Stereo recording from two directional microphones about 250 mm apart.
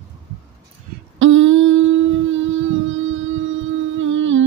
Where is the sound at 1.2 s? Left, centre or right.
Right.